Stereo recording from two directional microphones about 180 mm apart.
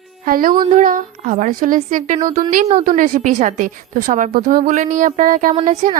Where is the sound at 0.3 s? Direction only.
50° right (ahead or behind).